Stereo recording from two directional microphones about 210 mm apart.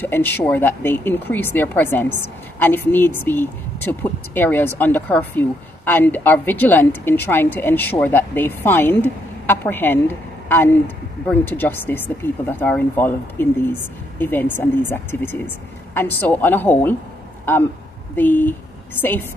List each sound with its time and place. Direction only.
0.0 s a woman's voice: 10° left (ahead or behind)
18.1 s a woman's voice: 10° left (ahead or behind)